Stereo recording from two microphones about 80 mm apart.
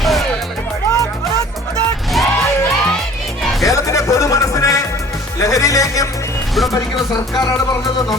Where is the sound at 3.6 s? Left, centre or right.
Left.